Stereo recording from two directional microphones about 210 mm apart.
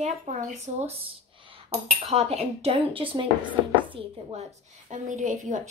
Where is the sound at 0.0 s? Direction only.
35° right (ahead or behind).